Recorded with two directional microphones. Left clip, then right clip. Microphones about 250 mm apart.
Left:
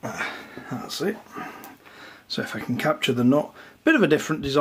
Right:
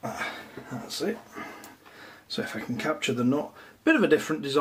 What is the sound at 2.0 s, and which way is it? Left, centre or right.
Speech, left.